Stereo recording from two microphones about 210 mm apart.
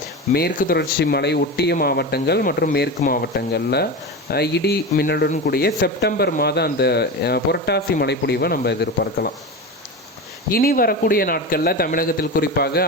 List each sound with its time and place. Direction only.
0.3 s speech: 50° left (ahead or behind)
10.5 s speech: 45° left (ahead or behind)